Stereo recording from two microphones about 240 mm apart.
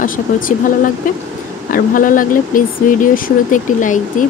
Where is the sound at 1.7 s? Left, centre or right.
Left.